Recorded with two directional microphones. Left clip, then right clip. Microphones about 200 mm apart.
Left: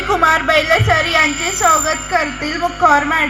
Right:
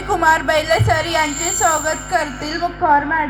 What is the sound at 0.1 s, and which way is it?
A woman's voice, 55° right (ahead or behind).